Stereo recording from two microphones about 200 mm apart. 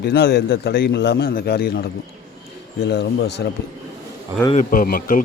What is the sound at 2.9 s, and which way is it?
Speech, 55° left (ahead or behind).